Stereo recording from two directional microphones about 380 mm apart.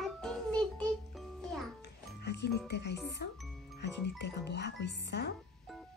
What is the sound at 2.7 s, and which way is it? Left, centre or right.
Speech, left.